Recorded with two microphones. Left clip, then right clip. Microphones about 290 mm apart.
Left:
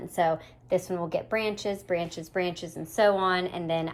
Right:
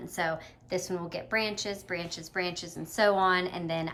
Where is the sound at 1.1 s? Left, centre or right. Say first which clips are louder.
Left 1 dB; right.